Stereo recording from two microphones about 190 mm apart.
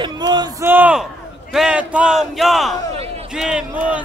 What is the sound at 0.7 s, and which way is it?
Speech, 10° right (ahead or behind).